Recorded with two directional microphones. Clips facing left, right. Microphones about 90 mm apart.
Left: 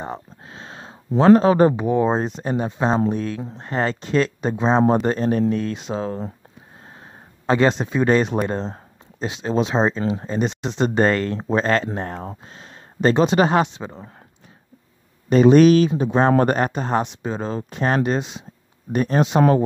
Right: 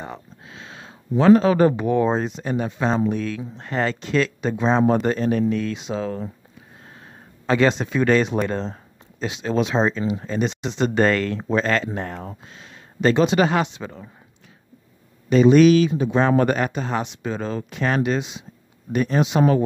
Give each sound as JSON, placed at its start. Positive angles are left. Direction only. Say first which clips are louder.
{"t": 0.0, "sound": "a sound", "louder": "left 4 dB", "side_deg": 35}
{"t": 1.7, "sound": "speech", "louder": "left 1 dB", "side_deg": 20}
{"t": 2.1, "sound": "speech", "louder": "left 1 dB", "side_deg": 35}
{"t": 7.4, "sound": "speech", "louder": "left 1 dB", "side_deg": 30}
{"t": 15.5, "sound": "speech", "louder": "left 1 dB", "side_deg": 40}
{"t": 17.2, "sound": "speech", "louder": "left 1 dB", "side_deg": 30}